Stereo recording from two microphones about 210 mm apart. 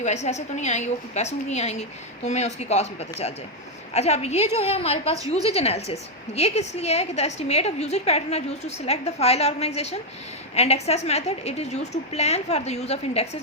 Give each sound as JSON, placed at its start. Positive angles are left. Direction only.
{"t": 0.0, "sound": "a woman's voice", "side_deg": 30}